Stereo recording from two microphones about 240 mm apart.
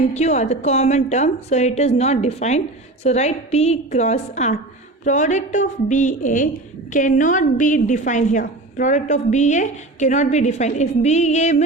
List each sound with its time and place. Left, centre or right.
0.1 s a woman's voice: left